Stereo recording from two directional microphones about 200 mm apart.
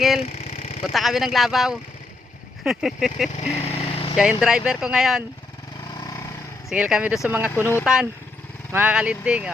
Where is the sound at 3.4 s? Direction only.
30° left (ahead or behind).